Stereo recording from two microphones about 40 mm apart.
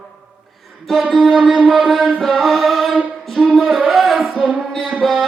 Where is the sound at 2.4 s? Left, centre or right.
Centre.